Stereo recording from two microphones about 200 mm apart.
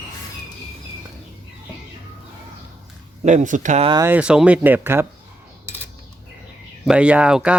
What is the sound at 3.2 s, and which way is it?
Speech, 35° right (ahead or behind).